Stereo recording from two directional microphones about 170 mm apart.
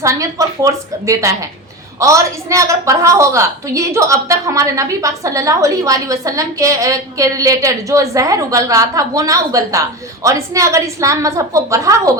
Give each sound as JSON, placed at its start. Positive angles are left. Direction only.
{"t": 0.0, "sound": "a woman's voice", "side_deg": -20}